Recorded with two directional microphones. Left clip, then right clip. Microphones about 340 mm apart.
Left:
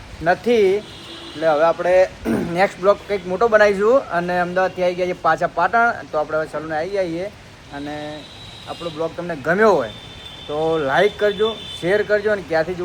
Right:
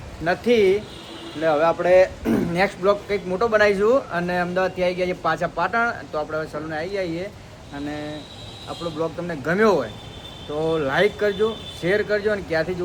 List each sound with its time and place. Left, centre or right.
0.3 s speech: centre
8.8 s speech: centre